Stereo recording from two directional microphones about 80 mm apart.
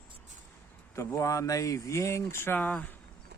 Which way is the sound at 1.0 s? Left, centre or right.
Left.